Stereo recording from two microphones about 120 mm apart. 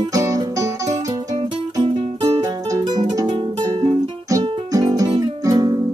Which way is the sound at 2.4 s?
30° right (ahead or behind).